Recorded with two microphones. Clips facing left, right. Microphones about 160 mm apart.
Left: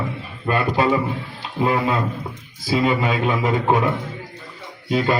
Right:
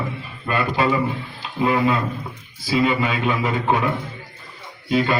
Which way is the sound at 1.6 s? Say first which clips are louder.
Right 1 dB; 35° left (ahead or behind).